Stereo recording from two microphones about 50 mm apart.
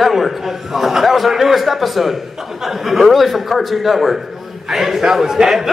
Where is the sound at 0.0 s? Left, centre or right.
Centre.